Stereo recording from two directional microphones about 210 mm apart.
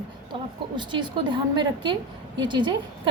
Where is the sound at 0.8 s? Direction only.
20° right (ahead or behind).